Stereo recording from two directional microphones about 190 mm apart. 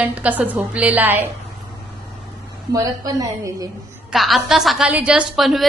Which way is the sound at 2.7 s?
20° right (ahead or behind).